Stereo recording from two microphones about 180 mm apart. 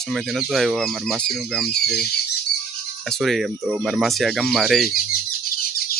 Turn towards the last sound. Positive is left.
turn(degrees=55)  # may be behind; listen again after turning